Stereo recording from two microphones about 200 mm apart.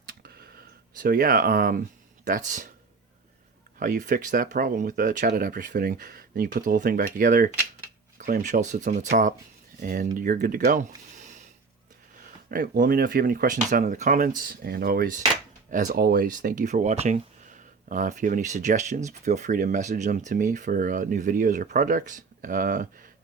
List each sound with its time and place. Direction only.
0.0 s a sound: 50° right (ahead or behind)
0.9 s speech: 45° right (ahead or behind)
3.8 s speech: 40° right (ahead or behind)
12.5 s speech: 45° right (ahead or behind)